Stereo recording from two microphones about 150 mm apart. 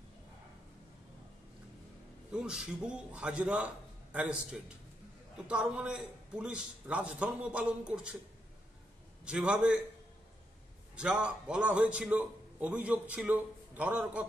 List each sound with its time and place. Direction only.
2.3 s a man's voice: 5° right (ahead or behind)
9.2 s a man's voice: 5° right (ahead or behind)
11.0 s a man's voice: 5° right (ahead or behind)